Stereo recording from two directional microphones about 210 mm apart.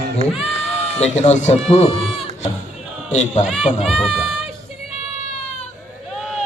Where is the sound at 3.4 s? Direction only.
Centre (ahead or behind).